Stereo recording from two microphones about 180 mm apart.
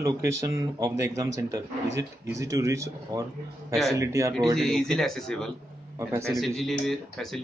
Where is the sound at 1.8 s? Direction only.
80° right.